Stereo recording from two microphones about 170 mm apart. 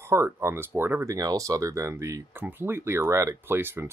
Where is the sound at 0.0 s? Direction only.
15° right (ahead or behind).